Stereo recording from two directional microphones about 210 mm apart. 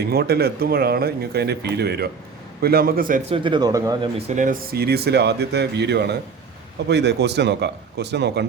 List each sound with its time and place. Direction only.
0.0 s speech: 50° right (ahead or behind)
3.2 s speech: 25° right (ahead or behind)
4.2 s speech: 35° right (ahead or behind); by 8.4 s 55° right (ahead or behind)